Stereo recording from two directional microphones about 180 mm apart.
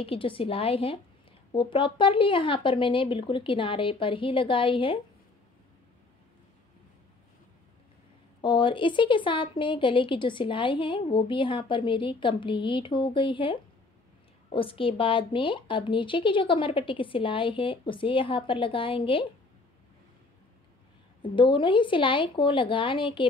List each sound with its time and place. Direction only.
0.0 s a woman's voice: 30° left (ahead or behind)
8.4 s speech: 25° left (ahead or behind)
21.2 s speech: 25° left (ahead or behind)